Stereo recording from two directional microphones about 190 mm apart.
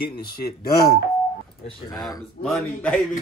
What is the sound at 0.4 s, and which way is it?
Speech, 55° left (ahead or behind).